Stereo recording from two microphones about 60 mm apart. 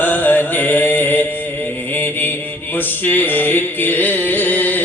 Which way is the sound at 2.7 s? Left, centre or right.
Left.